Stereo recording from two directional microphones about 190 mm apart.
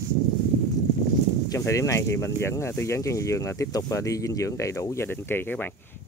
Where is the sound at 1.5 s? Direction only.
15° left (ahead or behind).